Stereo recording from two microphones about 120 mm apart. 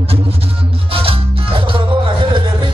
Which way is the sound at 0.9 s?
50° right (ahead or behind).